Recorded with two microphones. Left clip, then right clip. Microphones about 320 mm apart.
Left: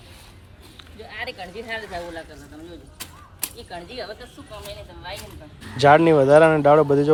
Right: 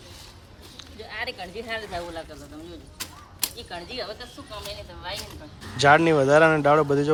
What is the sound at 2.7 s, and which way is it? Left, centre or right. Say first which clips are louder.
Speech: right 1 dB; centre.